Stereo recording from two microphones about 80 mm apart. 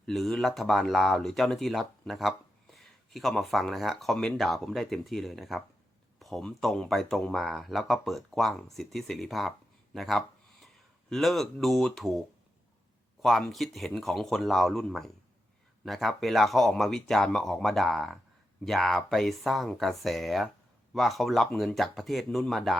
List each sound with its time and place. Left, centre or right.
0.0 s speech: centre
9.9 s a sound: centre
11.1 s speech: centre
13.2 s speech: centre